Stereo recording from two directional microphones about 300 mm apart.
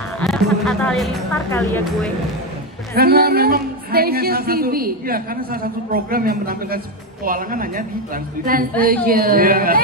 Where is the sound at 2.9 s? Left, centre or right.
Right.